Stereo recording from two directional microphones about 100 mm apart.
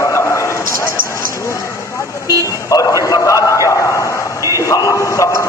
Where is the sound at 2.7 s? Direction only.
35° left (ahead or behind).